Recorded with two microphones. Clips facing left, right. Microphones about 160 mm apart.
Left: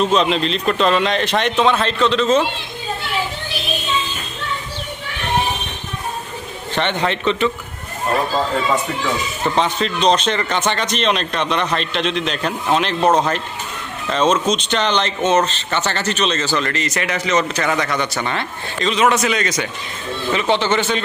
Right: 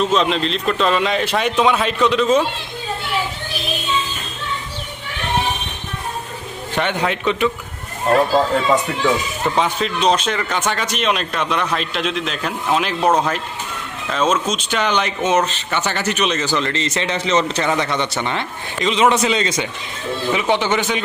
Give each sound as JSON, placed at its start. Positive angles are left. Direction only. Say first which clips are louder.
{"t": 0.0, "sound": "speech", "louder": "left 1 dB", "side_deg": 0}
{"t": 6.7, "sound": "speech", "louder": "even", "side_deg": -5}
{"t": 9.6, "sound": "speech", "louder": "left 1 dB", "side_deg": -5}
{"t": 20.3, "sound": "speech", "louder": "left 1 dB", "side_deg": -15}